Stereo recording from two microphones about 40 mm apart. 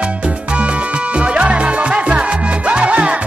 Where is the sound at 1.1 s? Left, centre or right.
Right.